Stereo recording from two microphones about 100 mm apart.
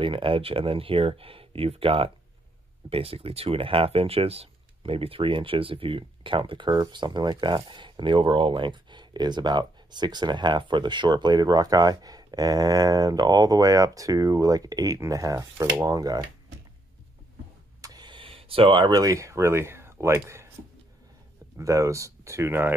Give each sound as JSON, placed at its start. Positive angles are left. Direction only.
{"t": 0.0, "sound": "speech", "side_deg": -60}
{"t": 17.8, "sound": "a sound", "side_deg": -45}
{"t": 18.9, "sound": "speech", "side_deg": -35}
{"t": 21.5, "sound": "speech", "side_deg": -30}